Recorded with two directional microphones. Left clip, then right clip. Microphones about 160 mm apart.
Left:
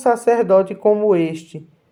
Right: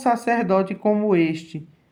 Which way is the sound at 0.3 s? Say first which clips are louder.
Left 6 dB; 30° left (ahead or behind).